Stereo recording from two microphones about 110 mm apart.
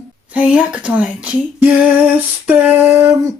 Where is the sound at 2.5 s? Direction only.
15° right (ahead or behind).